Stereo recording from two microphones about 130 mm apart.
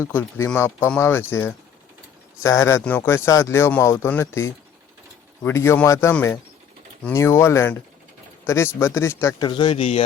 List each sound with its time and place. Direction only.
0.0 s speech: 15° left (ahead or behind)
9.4 s speech: 35° left (ahead or behind)